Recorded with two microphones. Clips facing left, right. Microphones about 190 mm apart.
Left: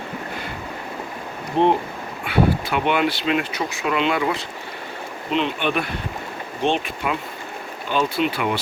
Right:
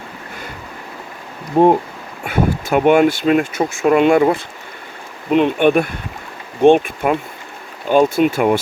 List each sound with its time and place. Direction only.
1.6 s speech: 45° right (ahead or behind)